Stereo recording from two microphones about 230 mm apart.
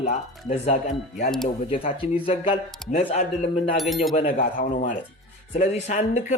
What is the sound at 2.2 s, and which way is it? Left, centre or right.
Speech, left.